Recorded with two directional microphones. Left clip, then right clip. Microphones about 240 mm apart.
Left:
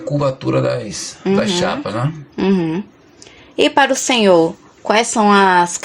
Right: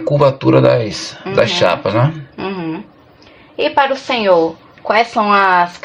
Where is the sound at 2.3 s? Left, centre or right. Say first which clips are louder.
Left 4 dB; left.